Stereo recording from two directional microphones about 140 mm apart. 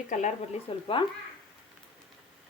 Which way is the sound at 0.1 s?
60° left (ahead or behind).